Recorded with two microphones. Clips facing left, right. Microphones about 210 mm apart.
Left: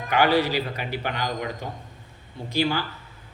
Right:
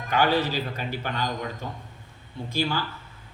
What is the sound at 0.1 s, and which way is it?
A man's voice, 15° left (ahead or behind).